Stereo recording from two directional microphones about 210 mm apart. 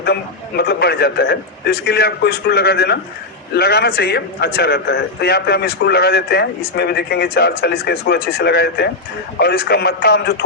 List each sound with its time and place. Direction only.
0.0 s a man's voice: 50° left (ahead or behind)